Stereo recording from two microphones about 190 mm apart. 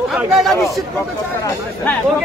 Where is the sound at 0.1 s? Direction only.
Centre (ahead or behind).